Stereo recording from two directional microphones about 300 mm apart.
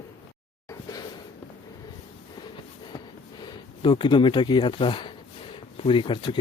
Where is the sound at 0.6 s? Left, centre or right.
Centre.